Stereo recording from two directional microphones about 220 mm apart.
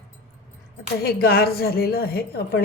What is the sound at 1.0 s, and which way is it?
A woman's voice, 45° left (ahead or behind).